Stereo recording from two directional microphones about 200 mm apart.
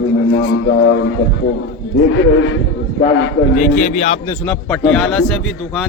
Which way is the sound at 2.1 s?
70° left (ahead or behind).